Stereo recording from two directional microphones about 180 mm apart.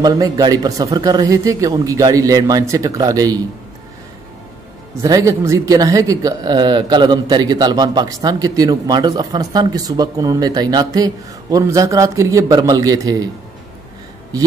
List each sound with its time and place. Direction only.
0.0 s speech: 20° right (ahead or behind)
5.0 s speech: 15° right (ahead or behind)